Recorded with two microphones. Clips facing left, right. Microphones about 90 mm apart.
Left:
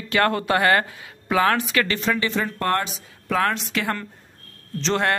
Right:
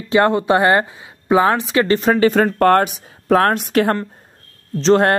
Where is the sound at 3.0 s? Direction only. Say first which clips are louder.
Right 8 dB; 45° right (ahead or behind).